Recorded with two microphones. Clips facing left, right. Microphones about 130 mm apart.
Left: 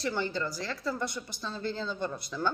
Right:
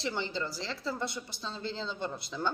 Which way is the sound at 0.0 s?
20° right (ahead or behind).